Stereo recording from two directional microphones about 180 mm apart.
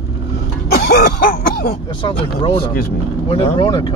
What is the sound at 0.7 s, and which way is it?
Throat clearing, 60° left (ahead or behind).